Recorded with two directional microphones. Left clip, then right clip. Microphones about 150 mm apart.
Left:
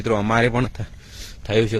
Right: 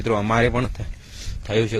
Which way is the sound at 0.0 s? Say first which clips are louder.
Left 1 dB; 35° left (ahead or behind).